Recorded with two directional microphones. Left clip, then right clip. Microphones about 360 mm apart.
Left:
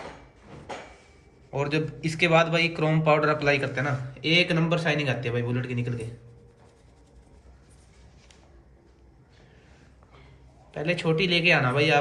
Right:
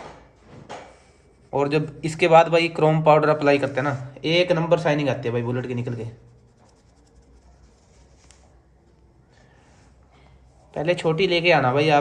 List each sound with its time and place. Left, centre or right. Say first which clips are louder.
1.5 s a man's voice: right 6 dB; right
10.7 s a man's voice: right 4 dB; right